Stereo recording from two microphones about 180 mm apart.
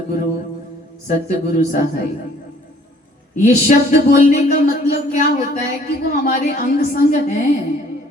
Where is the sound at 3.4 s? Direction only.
45° left (ahead or behind).